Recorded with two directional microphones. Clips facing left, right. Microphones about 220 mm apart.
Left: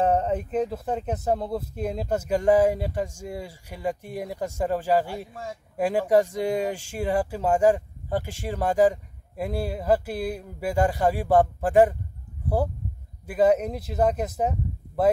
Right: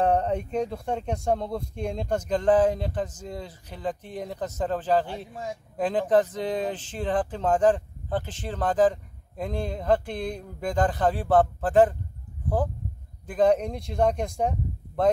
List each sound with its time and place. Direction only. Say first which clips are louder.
0.0 s speech: left 1 dB; 5° left (ahead or behind)
5.3 s speech: right 2 dB; 20° right (ahead or behind)
5.8 s speech: left 1 dB; 10° left (ahead or behind)
13.3 s speech: left 1 dB; 5° left (ahead or behind)